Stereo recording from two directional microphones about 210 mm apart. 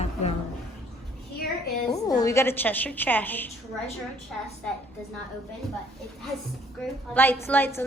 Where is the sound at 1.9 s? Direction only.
15° left (ahead or behind).